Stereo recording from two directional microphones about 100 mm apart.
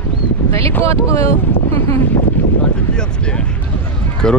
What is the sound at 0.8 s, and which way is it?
Speech, 30° left (ahead or behind).